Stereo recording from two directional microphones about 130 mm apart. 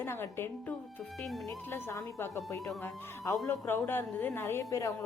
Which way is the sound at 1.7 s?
20° left (ahead or behind).